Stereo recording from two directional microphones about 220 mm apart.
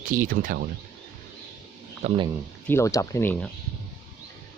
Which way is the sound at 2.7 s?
10° left (ahead or behind).